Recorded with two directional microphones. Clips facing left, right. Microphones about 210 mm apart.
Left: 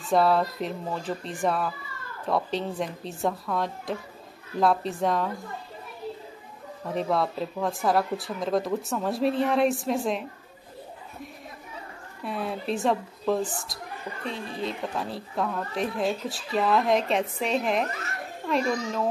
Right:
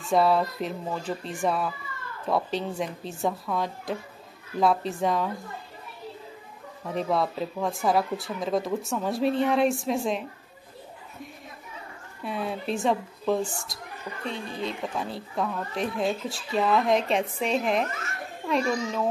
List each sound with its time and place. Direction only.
0.0 s a woman's voice: centre (ahead or behind)
6.9 s a woman's voice: centre (ahead or behind)
12.3 s a woman's voice: centre (ahead or behind)
17.8 s a child's voice: 35° left (ahead or behind)
18.5 s a woman's voice: centre (ahead or behind)